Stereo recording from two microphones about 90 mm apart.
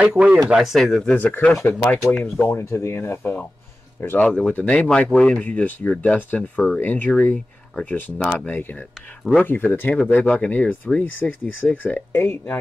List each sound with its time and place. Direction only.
0.0 s speech: 15° right (ahead or behind)
0.5 s speech: 5° right (ahead or behind)
1.1 s speech: 20° left (ahead or behind)
2.1 s speech: 5° left (ahead or behind)
2.4 s speech: 30° left (ahead or behind)
4.2 s speech: 10° left (ahead or behind)
8.2 s speech: 10° left (ahead or behind)
8.5 s speech: 20° left (ahead or behind)